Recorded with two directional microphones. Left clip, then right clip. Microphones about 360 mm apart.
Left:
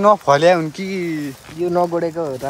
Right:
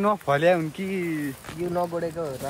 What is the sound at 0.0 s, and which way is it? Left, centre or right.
Speech, centre.